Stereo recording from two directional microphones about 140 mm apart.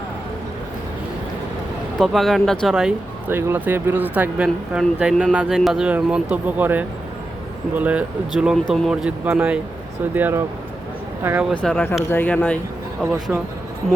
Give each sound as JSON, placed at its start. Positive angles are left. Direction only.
{"t": 2.0, "sound": "speech", "side_deg": 0}
{"t": 11.5, "sound": "speech", "side_deg": 10}